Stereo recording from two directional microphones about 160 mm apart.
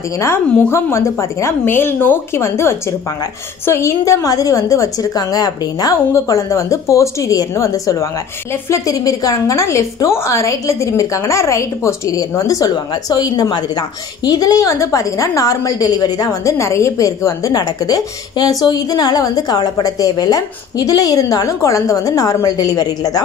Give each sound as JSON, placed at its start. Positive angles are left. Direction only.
{"t": 0.2, "sound": "a woman's voice", "side_deg": 15}